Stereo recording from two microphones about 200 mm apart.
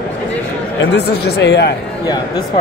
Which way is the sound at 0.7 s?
55° left (ahead or behind).